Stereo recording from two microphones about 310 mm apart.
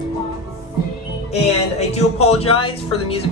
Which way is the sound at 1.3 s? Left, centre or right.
Left.